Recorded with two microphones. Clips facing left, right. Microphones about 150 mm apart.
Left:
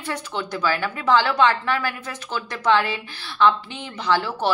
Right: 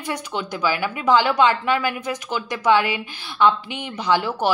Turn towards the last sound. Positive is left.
turn(degrees=-15)  # may be behind; listen again after turning